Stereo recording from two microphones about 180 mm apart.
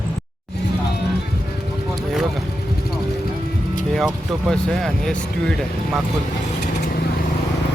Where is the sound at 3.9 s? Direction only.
Centre (ahead or behind).